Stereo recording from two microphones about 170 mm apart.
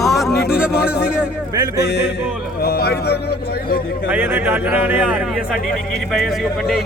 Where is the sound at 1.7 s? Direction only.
75° left (ahead or behind).